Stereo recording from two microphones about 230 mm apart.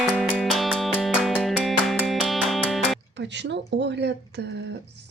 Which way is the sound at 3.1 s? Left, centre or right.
Right.